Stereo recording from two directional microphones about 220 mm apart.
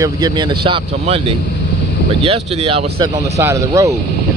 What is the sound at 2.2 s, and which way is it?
Speech, 25° right (ahead or behind).